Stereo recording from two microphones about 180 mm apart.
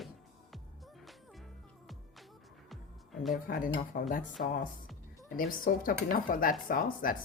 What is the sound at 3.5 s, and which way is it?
Speech, 50° left (ahead or behind).